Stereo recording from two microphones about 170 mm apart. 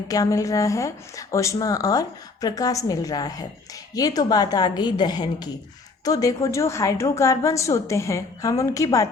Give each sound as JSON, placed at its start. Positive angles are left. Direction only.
{"t": 0.1, "sound": "a woman's voice", "side_deg": 20}